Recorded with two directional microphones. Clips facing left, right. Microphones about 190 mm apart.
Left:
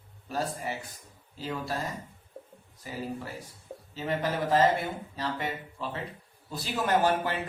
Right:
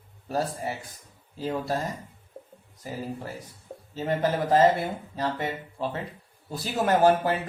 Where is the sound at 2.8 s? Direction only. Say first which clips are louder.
Right 2 dB; 40° right (ahead or behind).